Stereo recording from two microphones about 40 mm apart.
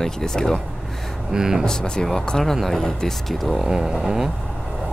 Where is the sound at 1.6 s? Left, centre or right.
Left.